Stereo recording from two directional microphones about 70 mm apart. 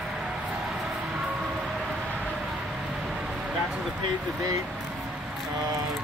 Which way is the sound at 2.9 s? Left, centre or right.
Centre.